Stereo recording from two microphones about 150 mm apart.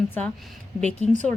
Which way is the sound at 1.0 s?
50° left (ahead or behind).